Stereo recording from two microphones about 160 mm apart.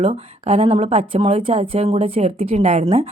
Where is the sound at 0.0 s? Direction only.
35° right (ahead or behind).